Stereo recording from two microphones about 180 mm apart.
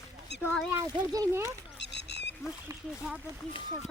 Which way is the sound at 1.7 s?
75° left (ahead or behind).